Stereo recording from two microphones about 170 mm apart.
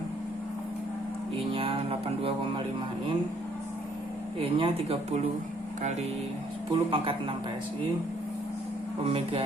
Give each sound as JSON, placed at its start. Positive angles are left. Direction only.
{"t": 1.5, "sound": "music", "side_deg": -35}
{"t": 4.4, "sound": "music", "side_deg": -35}
{"t": 6.7, "sound": "music", "side_deg": -30}
{"t": 9.0, "sound": "music", "side_deg": -35}